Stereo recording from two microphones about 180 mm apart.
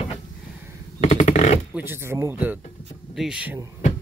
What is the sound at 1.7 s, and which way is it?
Speech, 10° right (ahead or behind).